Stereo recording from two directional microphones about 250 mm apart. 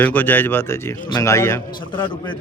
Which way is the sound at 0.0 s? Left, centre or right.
Centre.